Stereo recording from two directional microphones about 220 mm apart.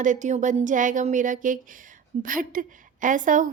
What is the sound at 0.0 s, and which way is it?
Speech, 35° right (ahead or behind).